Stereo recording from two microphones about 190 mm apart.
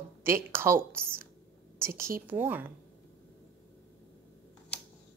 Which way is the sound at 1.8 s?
15° right (ahead or behind).